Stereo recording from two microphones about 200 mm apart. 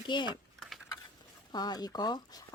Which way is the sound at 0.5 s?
Centre (ahead or behind).